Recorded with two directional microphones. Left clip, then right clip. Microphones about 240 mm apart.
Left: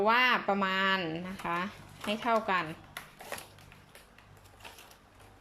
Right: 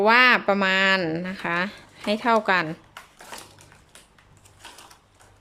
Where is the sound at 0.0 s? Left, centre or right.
Centre.